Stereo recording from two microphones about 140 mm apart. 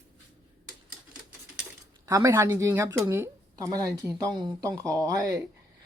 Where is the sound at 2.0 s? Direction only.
20° right (ahead or behind).